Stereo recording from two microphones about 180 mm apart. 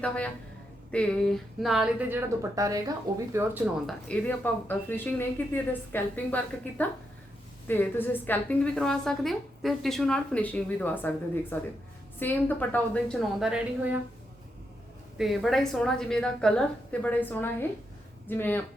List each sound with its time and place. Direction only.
0.9 s a woman's voice: 5° left (ahead or behind); by 3.5 s 15° right (ahead or behind)
3.8 s a woman's voice: 5° left (ahead or behind)
15.2 s a woman's voice: centre (ahead or behind)